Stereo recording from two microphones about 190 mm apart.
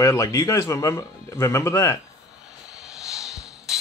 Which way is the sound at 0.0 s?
15° left (ahead or behind).